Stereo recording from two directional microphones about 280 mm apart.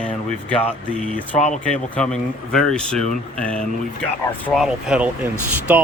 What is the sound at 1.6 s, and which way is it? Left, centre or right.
Speech, centre.